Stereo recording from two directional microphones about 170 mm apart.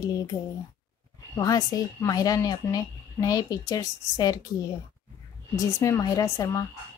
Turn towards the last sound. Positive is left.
turn(degrees=20)  # may be behind; listen again after turning